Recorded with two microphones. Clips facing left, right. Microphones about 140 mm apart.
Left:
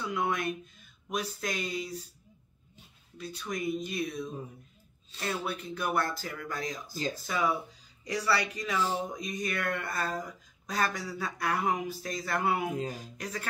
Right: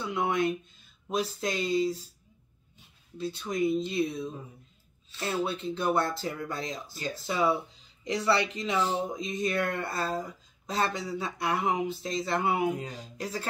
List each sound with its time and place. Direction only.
0.0 s speech: 25° right (ahead or behind)
3.2 s speech: 25° right (ahead or behind)